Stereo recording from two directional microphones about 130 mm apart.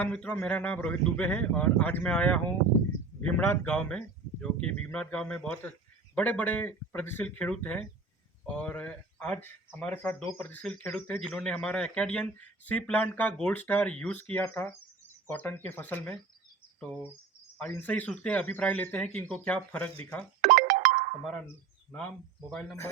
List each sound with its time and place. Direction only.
0.0 s speech: 10° left (ahead or behind)
17.6 s speech: 15° left (ahead or behind)
20.4 s music: 80° right
21.9 s speech: 5° left (ahead or behind)